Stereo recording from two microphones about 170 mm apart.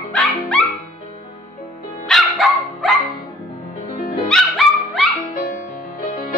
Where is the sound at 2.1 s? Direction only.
Centre (ahead or behind).